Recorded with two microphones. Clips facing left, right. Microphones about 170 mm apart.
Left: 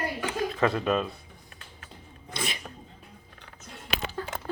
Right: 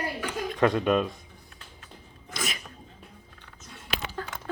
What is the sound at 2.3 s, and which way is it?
Sneeze, 30° left (ahead or behind).